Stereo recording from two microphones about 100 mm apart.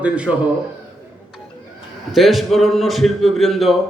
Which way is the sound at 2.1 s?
Centre (ahead or behind).